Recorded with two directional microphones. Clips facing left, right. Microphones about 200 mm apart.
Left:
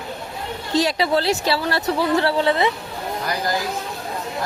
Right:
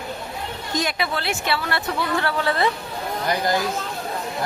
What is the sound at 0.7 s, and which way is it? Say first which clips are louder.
A woman's voice: left 7 dB; 35° left (ahead or behind).